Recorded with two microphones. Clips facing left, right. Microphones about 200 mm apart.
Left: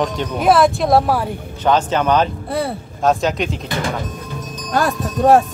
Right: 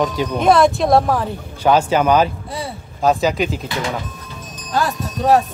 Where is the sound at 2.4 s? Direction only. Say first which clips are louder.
Left 6 dB; 60° left (ahead or behind).